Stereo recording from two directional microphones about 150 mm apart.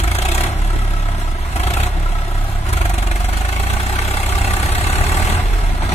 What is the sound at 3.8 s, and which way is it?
Vehicle, 45° left (ahead or behind).